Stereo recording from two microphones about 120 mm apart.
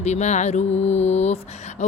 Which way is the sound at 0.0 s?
70° left (ahead or behind).